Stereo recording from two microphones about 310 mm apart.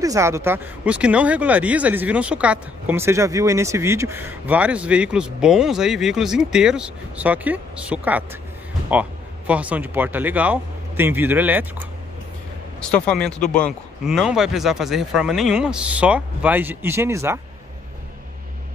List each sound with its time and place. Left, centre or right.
0.0 s speech: centre
9.5 s speech: centre
12.9 s speech: centre